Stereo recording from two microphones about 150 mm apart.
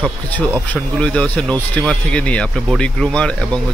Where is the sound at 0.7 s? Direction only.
5° left (ahead or behind).